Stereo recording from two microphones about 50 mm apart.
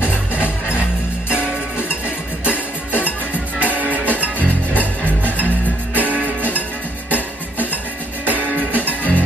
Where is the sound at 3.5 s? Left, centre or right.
Right.